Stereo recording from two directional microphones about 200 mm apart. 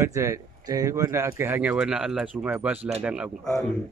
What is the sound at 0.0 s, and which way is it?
Speech, 15° right (ahead or behind).